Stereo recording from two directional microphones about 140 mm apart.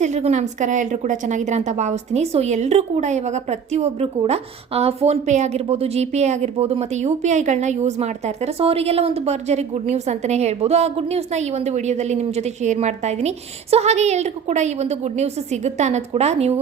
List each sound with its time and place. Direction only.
0.0 s a woman's voice: 55° right (ahead or behind)